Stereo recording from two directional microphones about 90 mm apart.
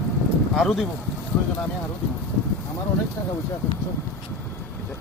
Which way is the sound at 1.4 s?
15° left (ahead or behind).